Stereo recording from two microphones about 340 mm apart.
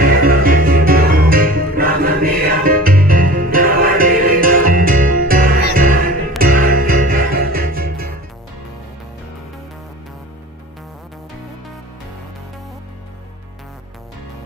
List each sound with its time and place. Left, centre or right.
0.0 s music: right